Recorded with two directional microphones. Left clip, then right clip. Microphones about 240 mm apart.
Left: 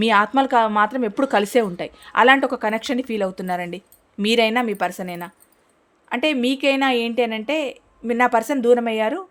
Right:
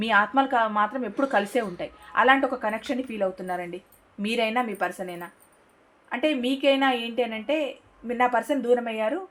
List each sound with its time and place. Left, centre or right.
0.0 s a woman's voice: left